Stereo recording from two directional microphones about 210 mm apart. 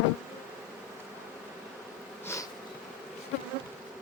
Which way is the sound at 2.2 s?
15° left (ahead or behind).